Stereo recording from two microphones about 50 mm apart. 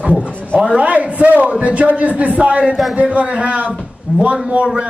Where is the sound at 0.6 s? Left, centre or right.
Centre.